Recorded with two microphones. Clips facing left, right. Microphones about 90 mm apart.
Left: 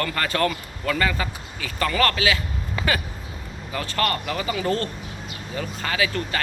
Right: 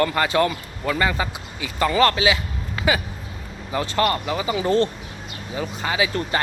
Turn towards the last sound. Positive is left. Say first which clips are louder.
# right 2 dB
turn(degrees=-20)  # may be behind; listen again after turning